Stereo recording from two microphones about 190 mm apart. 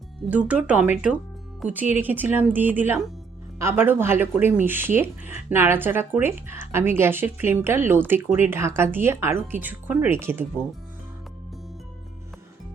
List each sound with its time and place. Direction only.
0.3 s speech: 5° right (ahead or behind)